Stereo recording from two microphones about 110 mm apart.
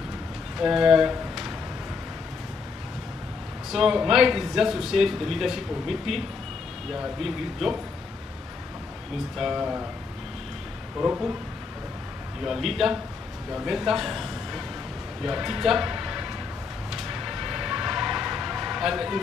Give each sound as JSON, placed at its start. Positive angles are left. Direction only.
{"t": 0.6, "sound": "speech", "side_deg": -5}
{"t": 3.7, "sound": "a man's voice", "side_deg": -5}
{"t": 9.4, "sound": "speech", "side_deg": -10}
{"t": 11.0, "sound": "speech", "side_deg": -15}
{"t": 12.4, "sound": "a man's voice", "side_deg": 0}
{"t": 16.9, "sound": "a sound", "side_deg": -5}